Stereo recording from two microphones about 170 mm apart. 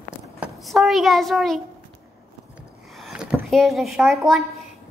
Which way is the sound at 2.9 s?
Centre (ahead or behind).